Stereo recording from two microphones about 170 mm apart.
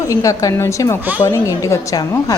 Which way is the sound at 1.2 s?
15° left (ahead or behind).